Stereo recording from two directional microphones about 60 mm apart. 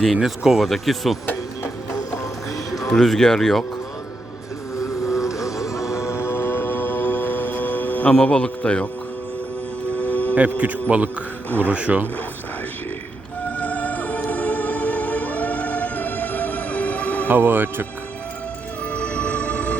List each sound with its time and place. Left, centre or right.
0.0 s speech: centre
1.9 s music: left
2.9 s a man's voice: centre
4.8 s vehicle: left
5.5 s music: left
8.1 s a man's voice: centre
10.0 s music: left
10.3 s a man's voice: right
13.6 s music: left
17.2 s speech: right
18.9 s music: left